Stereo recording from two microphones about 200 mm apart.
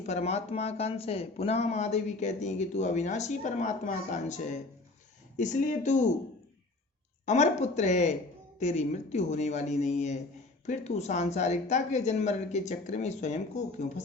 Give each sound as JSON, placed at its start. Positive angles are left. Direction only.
{"t": 0.0, "sound": "speech", "side_deg": 35}
{"t": 7.3, "sound": "speech", "side_deg": 35}